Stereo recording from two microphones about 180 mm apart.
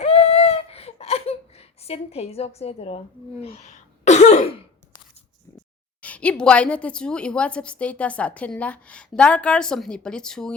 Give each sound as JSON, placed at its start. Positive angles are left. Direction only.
{"t": 0.0, "sound": "a sound", "side_deg": 35}
{"t": 3.4, "sound": "throat clearing", "side_deg": 35}
{"t": 6.0, "sound": "a woman's voice", "side_deg": 5}